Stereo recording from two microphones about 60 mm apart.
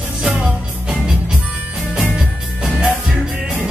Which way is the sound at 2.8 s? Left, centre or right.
Centre.